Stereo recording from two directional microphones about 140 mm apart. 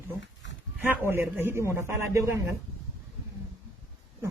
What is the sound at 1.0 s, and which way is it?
A man's voice, 15° right (ahead or behind).